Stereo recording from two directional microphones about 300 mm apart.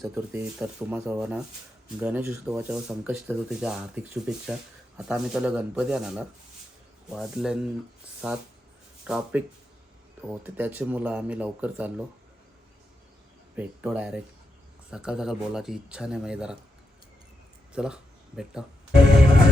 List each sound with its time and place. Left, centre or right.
0.0 s speech: centre
13.6 s speech: centre
17.7 s speech: centre